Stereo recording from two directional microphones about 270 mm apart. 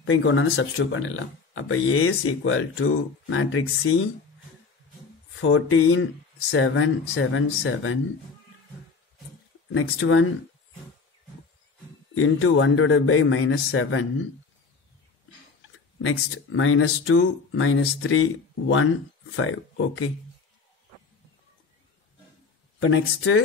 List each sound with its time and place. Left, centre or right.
0.0 s speech: left
5.4 s speech: left
9.7 s speech: left
12.1 s speech: left
16.0 s speech: left
22.8 s speech: left